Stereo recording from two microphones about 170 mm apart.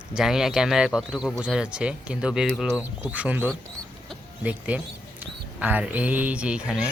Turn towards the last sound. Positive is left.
turn(degrees=-5)  # may be behind; listen again after turning